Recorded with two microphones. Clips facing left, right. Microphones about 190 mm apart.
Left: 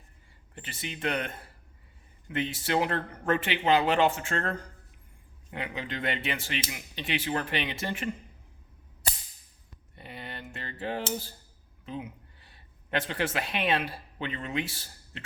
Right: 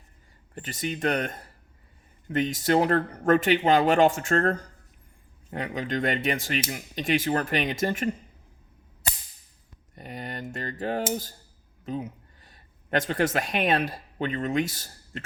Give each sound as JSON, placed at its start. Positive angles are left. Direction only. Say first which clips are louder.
{"t": 0.5, "sound": "speech", "louder": "right 8 dB", "side_deg": -45}
{"t": 9.9, "sound": "speech", "louder": "right 6 dB", "side_deg": -45}